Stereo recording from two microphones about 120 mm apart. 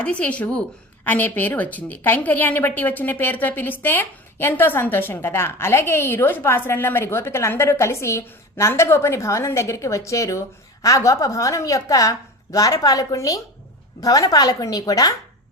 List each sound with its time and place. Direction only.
0.0 s a woman's voice: 10° left (ahead or behind); by 15.1 s 30° left (ahead or behind)